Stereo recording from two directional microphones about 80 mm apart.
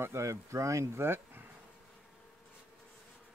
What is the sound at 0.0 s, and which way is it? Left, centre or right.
Speech, right.